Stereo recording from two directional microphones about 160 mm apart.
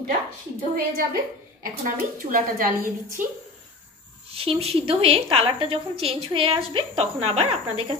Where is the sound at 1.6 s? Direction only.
60° right (ahead or behind).